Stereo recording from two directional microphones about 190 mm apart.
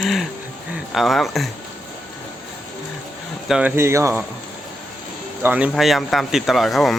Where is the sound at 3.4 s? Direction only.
5° right (ahead or behind).